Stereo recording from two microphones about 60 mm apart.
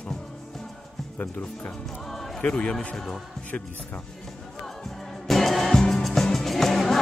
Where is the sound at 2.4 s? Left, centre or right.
Centre.